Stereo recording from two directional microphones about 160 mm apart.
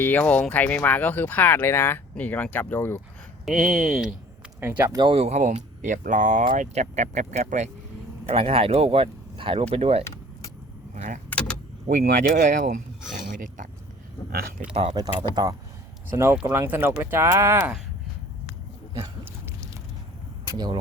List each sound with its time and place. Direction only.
0.0 s speech: 10° left (ahead or behind)
3.4 s speech: centre (ahead or behind)
4.6 s speech: 15° right (ahead or behind)
4.9 s speech: 35° right (ahead or behind)
8.3 s speech: 35° right (ahead or behind)
10.9 s speech: 50° right (ahead or behind)
11.3 s vehicle: 5° left (ahead or behind)
12.0 s speech: 65° right (ahead or behind)
14.7 s speech: 40° right (ahead or behind)
14.9 s speech: 25° right (ahead or behind)
18.9 s a sound: 20° right (ahead or behind)